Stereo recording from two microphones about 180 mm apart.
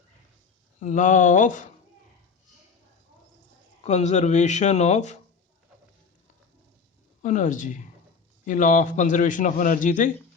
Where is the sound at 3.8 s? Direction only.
40° left (ahead or behind).